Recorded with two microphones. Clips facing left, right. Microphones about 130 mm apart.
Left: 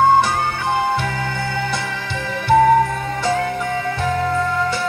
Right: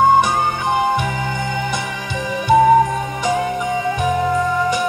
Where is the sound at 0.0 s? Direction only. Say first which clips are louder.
Right 1 dB; 15° right (ahead or behind).